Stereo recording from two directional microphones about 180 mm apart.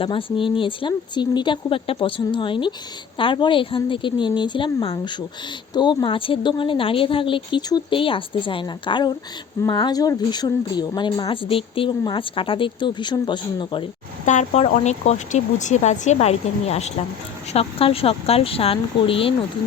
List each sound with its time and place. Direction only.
0.0 s speech: 30° left (ahead or behind)
14.3 s speech: 40° left (ahead or behind)